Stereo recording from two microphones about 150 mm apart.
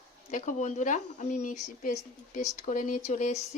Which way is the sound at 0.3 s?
55° left (ahead or behind).